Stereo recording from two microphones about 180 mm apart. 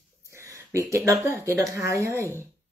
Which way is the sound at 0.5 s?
15° right (ahead or behind).